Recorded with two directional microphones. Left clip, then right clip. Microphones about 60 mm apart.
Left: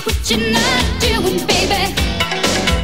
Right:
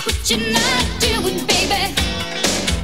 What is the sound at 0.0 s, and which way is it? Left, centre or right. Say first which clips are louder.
Music: left 2 dB; right.